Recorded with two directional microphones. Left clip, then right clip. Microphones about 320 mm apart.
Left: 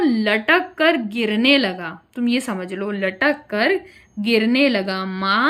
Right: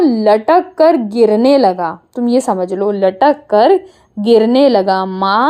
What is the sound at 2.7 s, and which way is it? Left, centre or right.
Speech, right.